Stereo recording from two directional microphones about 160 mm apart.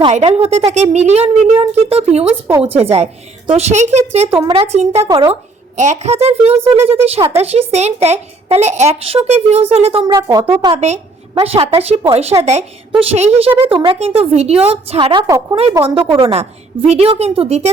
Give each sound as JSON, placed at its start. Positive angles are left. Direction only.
{"t": 0.3, "sound": "a woman's voice", "side_deg": -40}
{"t": 5.0, "sound": "speech", "side_deg": -25}
{"t": 5.3, "sound": "a woman's voice", "side_deg": -50}
{"t": 10.8, "sound": "a woman's voice", "side_deg": -45}
{"t": 16.1, "sound": "speech", "side_deg": -40}